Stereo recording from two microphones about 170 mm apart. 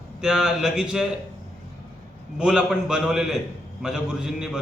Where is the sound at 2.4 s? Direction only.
5° right (ahead or behind).